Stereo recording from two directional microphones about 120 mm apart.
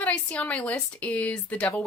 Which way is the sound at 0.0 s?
10° left (ahead or behind).